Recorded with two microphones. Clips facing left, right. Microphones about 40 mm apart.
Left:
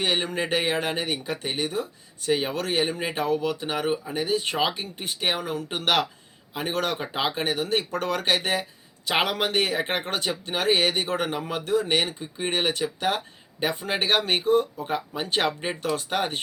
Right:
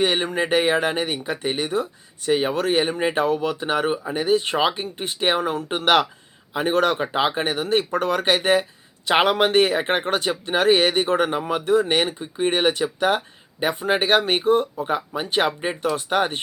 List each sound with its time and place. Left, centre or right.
0.0 s speech: centre
7.9 s speech: centre
11.6 s speech: right
11.9 s speech: centre
14.4 s speech: right
14.8 s speech: centre
16.0 s speech: right